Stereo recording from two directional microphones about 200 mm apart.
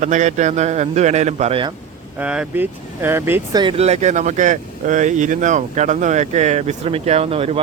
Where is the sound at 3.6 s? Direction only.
30° right (ahead or behind).